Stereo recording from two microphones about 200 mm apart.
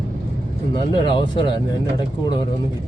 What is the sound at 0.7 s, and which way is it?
Speech, 25° left (ahead or behind).